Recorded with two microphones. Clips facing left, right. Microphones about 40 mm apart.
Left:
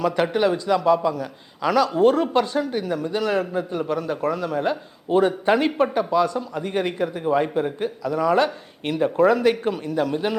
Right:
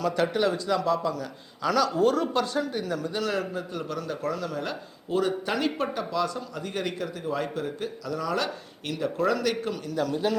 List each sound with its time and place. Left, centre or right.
0.0 s speech: left
1.9 s speech: left